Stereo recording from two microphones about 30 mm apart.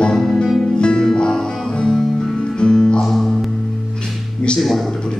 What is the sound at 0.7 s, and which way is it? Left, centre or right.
Music, left.